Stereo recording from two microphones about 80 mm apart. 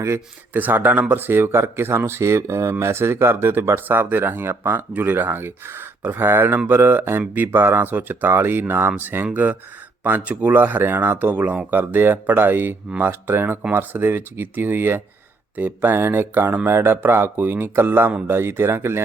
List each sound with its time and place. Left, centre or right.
0.5 s speech: right